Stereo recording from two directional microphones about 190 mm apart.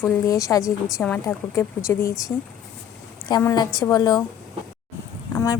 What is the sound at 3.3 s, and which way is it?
Speech, 20° left (ahead or behind).